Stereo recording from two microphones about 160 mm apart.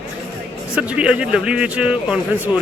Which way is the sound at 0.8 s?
5° right (ahead or behind).